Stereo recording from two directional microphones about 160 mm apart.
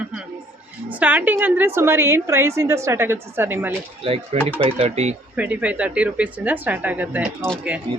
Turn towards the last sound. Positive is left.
turn(degrees=-10)  # may be behind; listen again after turning